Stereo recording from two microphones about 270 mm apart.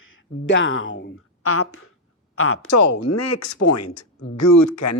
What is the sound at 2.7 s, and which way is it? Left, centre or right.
Speech, left.